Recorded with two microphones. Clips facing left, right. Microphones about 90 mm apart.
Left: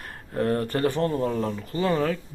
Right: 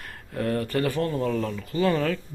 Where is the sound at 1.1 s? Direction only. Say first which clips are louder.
Left 1 dB; 25° left (ahead or behind).